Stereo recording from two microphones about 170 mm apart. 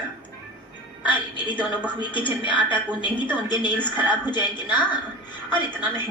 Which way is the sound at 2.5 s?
10° right (ahead or behind).